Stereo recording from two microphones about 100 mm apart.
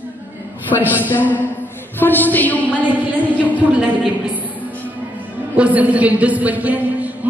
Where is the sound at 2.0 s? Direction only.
20° left (ahead or behind).